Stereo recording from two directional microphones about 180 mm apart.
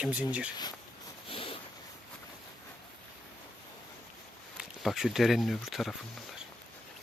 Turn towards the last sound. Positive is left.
turn(degrees=0)  # may be behind; listen again after turning